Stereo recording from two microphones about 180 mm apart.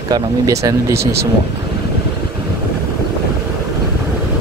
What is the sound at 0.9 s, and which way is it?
Speech, 60° right (ahead or behind).